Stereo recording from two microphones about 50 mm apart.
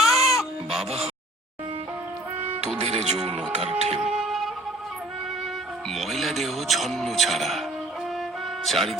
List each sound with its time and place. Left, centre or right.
0.0 s goat: centre
2.6 s speech: centre
3.7 s music: centre
5.9 s a man's voice: centre
8.6 s a man's voice: centre